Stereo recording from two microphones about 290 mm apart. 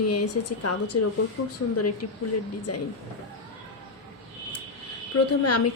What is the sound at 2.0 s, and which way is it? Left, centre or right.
Speech, left.